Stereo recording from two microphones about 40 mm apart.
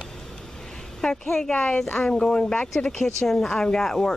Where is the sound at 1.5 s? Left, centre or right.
Left.